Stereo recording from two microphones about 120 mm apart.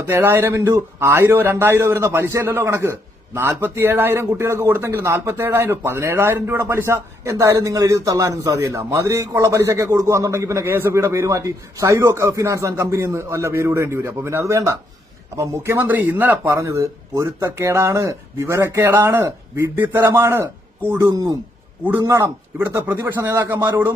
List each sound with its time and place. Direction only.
0.0 s a man's voice: 20° right (ahead or behind)